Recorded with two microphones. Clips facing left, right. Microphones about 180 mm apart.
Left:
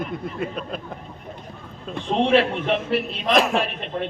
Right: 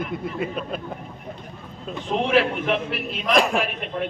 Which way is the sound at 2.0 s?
30° left (ahead or behind).